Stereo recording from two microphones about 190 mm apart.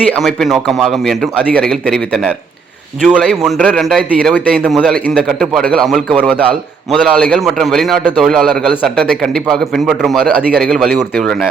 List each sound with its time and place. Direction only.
0.2 s a man's voice: centre (ahead or behind)